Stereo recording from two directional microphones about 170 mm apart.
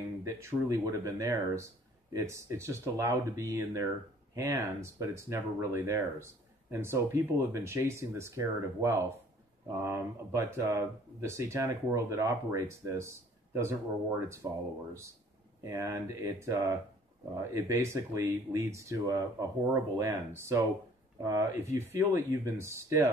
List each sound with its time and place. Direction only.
0.2 s speech: 15° right (ahead or behind)
15.6 s speech: 15° right (ahead or behind)